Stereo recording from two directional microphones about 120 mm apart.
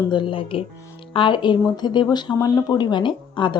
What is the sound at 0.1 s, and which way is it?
Speech, 45° left (ahead or behind).